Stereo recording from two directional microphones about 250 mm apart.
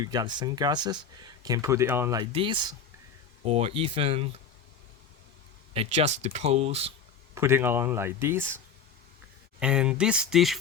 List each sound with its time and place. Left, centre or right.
0.0 s speech: centre
5.7 s speech: right
7.3 s speech: centre